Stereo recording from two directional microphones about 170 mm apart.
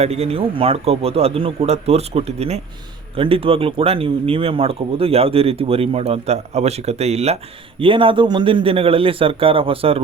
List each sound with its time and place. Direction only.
0.0 s speech: 35° right (ahead or behind)